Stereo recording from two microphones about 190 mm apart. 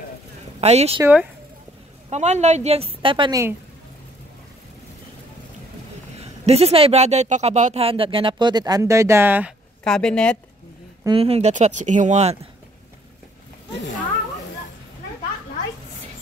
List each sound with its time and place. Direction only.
0.6 s speech: 35° right (ahead or behind)
2.0 s a woman's voice: 35° right (ahead or behind); by 3.5 s 20° right (ahead or behind)
6.2 s speech: 35° right (ahead or behind); by 9.5 s 10° right (ahead or behind)
9.8 s speech: 5° left (ahead or behind)
11.1 s a woman's voice: 30° right (ahead or behind)